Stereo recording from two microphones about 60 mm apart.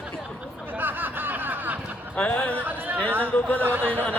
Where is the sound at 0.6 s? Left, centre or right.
Right.